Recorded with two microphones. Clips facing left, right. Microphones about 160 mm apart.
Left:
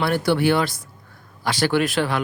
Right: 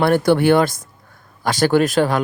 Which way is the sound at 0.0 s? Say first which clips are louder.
Right 5 dB; 50° right (ahead or behind).